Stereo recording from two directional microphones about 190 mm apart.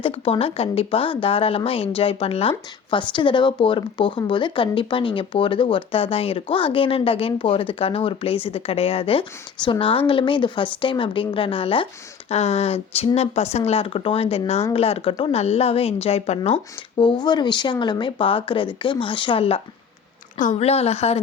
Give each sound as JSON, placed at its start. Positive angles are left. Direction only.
{"t": 0.0, "sound": "a woman's voice", "side_deg": 30}